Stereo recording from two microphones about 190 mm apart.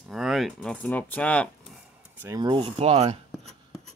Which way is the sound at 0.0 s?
Centre (ahead or behind).